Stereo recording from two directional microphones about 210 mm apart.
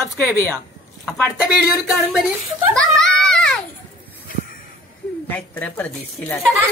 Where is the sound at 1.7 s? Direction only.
Centre (ahead or behind).